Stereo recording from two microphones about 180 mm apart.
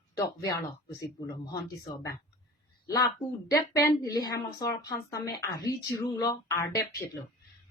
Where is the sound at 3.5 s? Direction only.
15° left (ahead or behind).